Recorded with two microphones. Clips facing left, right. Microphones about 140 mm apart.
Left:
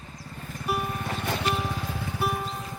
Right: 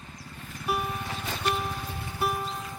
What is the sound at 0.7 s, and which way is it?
Music, centre (ahead or behind).